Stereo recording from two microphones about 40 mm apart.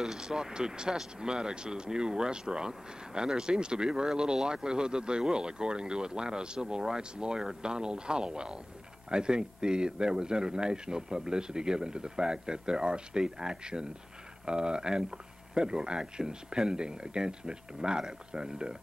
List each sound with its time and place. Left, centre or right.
0.0 s speech: centre